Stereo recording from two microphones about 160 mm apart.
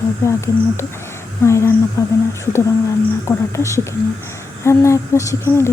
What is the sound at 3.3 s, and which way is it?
Speech, 20° left (ahead or behind).